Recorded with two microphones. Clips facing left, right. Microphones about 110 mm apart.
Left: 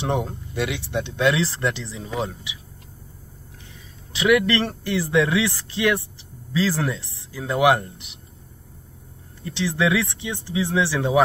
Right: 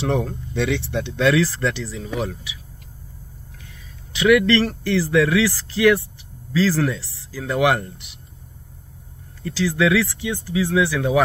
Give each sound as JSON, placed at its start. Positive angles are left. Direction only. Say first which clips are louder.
{"t": 0.0, "sound": "speech", "louder": "right 2 dB", "side_deg": 20}
{"t": 4.1, "sound": "speech", "louder": "right 3 dB", "side_deg": 20}
{"t": 9.4, "sound": "speech", "louder": "right 3 dB", "side_deg": 20}